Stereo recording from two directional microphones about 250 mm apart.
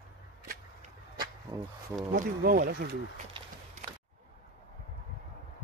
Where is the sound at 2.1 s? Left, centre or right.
Right.